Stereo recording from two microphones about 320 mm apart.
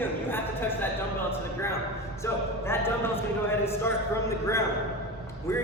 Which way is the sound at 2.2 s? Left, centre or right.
Centre.